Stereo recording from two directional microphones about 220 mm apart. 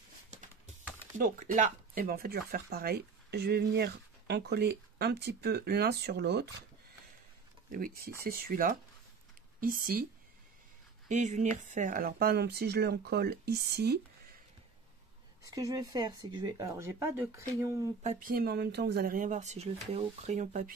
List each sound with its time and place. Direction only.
1.1 s speech: 35° right (ahead or behind)
7.7 s speech: 40° right (ahead or behind)
11.1 s speech: 35° right (ahead or behind)
15.4 s speech: 15° right (ahead or behind)
18.0 s speech: 40° right (ahead or behind)